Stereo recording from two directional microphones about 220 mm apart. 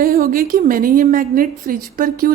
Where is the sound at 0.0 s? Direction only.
40° right (ahead or behind).